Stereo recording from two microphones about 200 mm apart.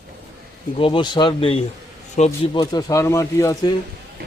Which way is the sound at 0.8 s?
25° left (ahead or behind).